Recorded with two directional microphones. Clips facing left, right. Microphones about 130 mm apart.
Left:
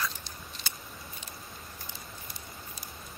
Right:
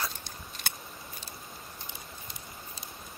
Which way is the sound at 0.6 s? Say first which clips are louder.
Right 5 dB; 60° right (ahead or behind).